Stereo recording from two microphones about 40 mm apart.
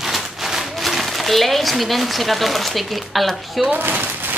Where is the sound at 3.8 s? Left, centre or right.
Right.